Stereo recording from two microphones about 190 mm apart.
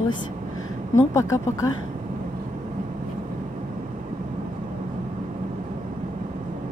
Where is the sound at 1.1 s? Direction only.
15° left (ahead or behind).